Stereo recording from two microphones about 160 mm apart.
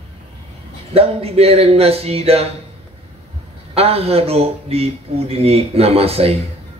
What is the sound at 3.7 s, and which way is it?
A man's voice, 40° right (ahead or behind).